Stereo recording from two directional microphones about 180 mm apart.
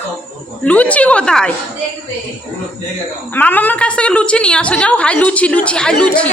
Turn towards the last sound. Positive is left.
turn(degrees=5)  # may be behind; listen again after turning